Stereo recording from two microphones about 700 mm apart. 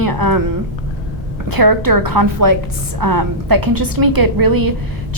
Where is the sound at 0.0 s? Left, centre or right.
Right.